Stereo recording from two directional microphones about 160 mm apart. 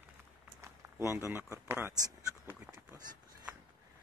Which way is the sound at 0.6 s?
15° right (ahead or behind).